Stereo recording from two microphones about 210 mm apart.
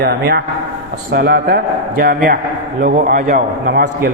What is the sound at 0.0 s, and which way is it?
A man's voice, 50° right (ahead or behind).